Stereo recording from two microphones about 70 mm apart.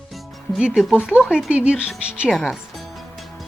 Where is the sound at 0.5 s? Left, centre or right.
Centre.